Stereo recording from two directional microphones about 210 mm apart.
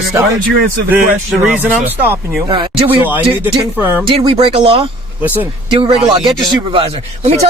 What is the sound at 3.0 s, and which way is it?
Speech, 10° right (ahead or behind).